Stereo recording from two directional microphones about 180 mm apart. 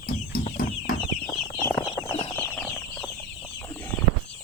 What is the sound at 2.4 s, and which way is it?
Chicken, 5° left (ahead or behind).